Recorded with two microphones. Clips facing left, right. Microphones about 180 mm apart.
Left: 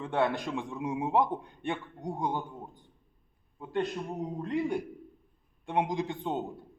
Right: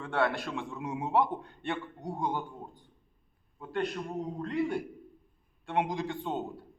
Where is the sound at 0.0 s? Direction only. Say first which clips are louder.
Left 1 dB; 20° left (ahead or behind).